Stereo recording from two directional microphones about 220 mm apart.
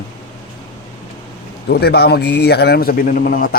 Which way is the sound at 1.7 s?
45° left (ahead or behind).